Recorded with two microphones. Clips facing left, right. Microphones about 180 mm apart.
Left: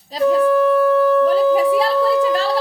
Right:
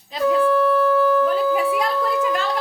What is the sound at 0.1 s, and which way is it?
Speech, 35° left (ahead or behind).